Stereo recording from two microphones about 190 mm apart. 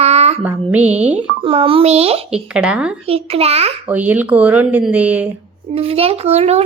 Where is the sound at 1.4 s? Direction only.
30° right (ahead or behind).